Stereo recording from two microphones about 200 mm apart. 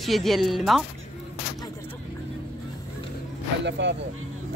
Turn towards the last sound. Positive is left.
turn(degrees=-60)  # may be behind; listen again after turning